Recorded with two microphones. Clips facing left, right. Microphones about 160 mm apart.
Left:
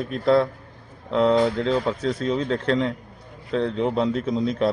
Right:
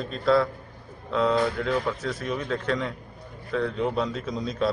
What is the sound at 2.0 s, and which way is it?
Speech, 60° left (ahead or behind).